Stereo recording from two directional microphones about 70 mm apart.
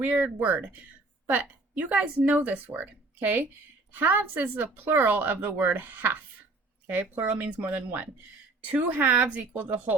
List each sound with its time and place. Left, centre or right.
0.0 s speech: right